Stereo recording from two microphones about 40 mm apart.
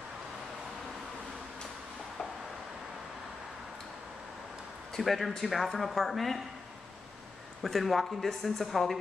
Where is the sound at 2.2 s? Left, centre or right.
Left.